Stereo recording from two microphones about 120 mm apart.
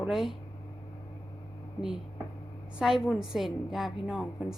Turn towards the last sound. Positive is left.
turn(degrees=0)  # may be behind; listen again after turning